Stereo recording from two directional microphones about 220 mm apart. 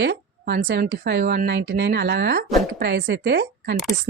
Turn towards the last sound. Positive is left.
turn(degrees=-50)  # may be behind; listen again after turning